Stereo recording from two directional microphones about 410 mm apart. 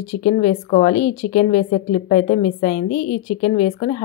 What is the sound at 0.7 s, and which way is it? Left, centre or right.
A woman's voice, centre.